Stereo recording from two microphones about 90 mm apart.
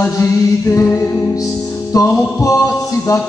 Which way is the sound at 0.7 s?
35° left (ahead or behind).